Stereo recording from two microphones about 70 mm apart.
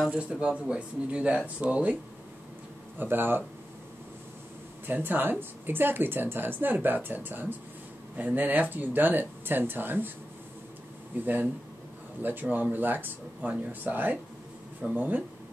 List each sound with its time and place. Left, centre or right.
0.1 s speech: centre
3.0 s speech: right
4.8 s speech: right
11.1 s speech: right